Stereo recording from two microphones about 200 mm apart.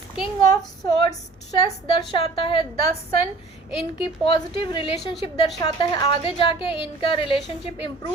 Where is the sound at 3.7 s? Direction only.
25° left (ahead or behind).